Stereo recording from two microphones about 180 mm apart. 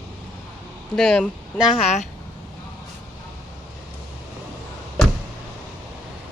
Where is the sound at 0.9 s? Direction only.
5° left (ahead or behind).